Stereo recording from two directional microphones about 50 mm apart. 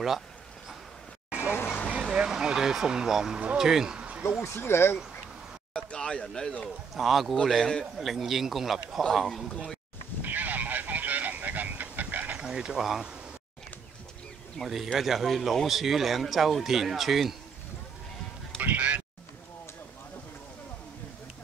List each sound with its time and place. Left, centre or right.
1.5 s vehicle: left
2.1 s speech: centre
4.4 s speech: left
5.7 s a sound: centre
7.0 s speech: centre
10.2 s vehicle: right
12.4 s speech: centre
14.6 s speech: centre
18.6 s a sound: right